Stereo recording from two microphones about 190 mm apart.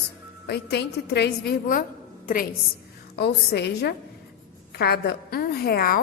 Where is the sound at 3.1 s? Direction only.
60° left (ahead or behind).